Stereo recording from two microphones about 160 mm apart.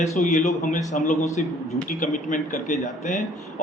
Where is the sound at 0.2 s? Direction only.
50° left (ahead or behind).